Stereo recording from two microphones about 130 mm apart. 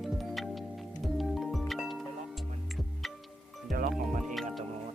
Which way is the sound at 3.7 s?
90° right.